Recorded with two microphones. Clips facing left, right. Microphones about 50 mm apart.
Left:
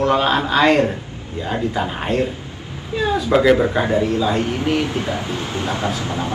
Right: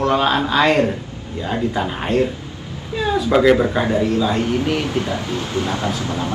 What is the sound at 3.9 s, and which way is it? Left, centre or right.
Speech, centre.